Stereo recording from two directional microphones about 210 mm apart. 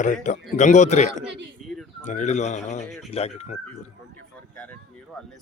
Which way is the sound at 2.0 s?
35° left (ahead or behind).